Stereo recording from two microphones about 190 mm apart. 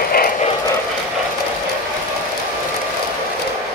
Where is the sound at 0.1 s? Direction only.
50° left (ahead or behind).